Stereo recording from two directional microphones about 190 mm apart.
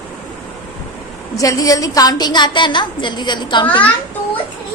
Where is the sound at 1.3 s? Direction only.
20° left (ahead or behind).